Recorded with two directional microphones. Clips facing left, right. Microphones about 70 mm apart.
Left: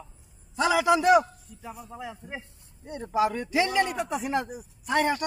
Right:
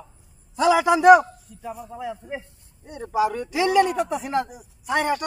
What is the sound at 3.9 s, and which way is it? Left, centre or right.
Speech, centre.